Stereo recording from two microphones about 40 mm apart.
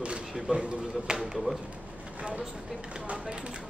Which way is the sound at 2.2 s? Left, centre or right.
Right.